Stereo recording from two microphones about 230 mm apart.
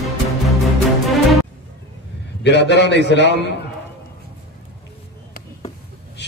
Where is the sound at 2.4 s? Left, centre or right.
Left.